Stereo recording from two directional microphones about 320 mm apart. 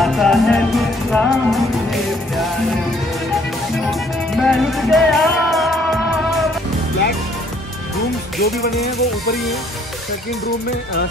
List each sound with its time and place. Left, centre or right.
0.0 s music: centre
4.4 s music: centre
8.4 s music: left